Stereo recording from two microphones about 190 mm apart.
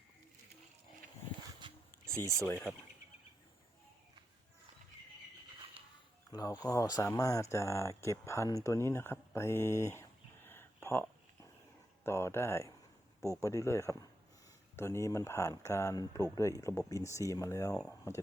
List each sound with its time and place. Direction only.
1.6 s a sound: 25° right (ahead or behind)
2.0 s speech: 15° right (ahead or behind)
2.5 s speech: 10° left (ahead or behind)
6.3 s speech: 20° left (ahead or behind)
12.0 s speech: 15° left (ahead or behind)